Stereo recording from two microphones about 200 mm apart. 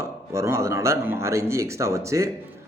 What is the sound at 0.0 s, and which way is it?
A man's voice, 15° right (ahead or behind).